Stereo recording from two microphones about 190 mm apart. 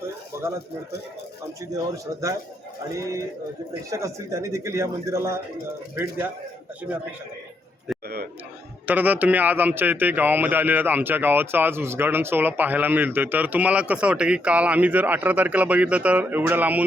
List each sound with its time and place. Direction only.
0.3 s a sound: 15° right (ahead or behind)
2.9 s a man's voice: 15° right (ahead or behind)
8.9 s a man's voice: 10° right (ahead or behind)